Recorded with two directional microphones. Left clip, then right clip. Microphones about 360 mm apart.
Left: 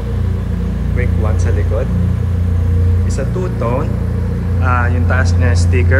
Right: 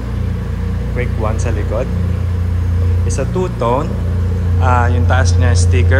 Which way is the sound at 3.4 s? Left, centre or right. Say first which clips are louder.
Right 4 dB; centre.